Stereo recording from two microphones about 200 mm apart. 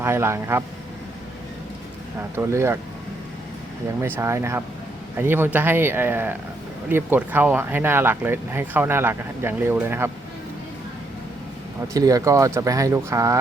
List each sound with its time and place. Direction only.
0.0 s speech: 10° right (ahead or behind)
2.1 s speech: 10° right (ahead or behind)
4.0 s speech: 10° right (ahead or behind)
11.9 s speech: 15° right (ahead or behind)